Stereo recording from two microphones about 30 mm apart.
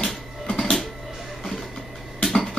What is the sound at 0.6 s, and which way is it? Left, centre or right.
Printer, centre.